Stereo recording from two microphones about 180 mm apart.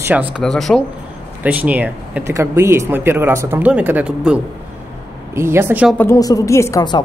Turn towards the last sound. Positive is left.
turn(degrees=20)  # may be behind; listen again after turning